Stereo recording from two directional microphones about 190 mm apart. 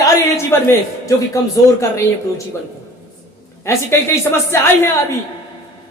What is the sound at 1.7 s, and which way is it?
Speech, 15° left (ahead or behind).